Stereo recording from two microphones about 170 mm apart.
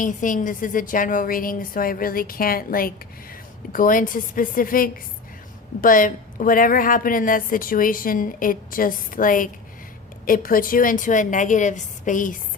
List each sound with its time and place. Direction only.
0.0 s a woman's voice: 50° left (ahead or behind)